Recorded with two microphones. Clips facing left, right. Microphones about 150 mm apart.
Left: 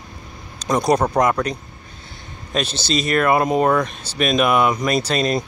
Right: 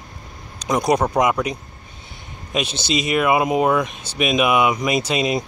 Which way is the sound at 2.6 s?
55° right (ahead or behind).